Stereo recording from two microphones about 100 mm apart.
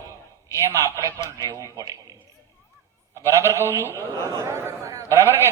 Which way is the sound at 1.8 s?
40° right (ahead or behind).